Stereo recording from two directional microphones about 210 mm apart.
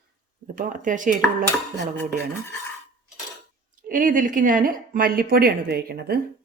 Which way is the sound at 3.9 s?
40° right (ahead or behind).